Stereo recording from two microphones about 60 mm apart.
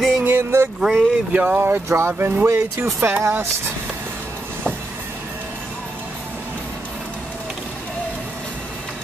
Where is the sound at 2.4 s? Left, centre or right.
Right.